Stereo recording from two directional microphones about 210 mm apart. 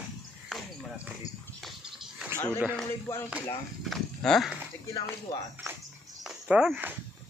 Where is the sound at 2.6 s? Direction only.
Centre (ahead or behind).